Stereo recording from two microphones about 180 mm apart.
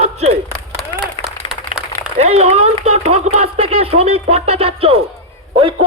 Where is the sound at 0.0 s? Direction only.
35° right (ahead or behind).